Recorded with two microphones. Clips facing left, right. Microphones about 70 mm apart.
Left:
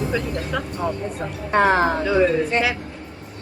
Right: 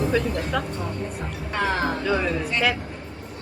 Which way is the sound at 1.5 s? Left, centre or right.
Left.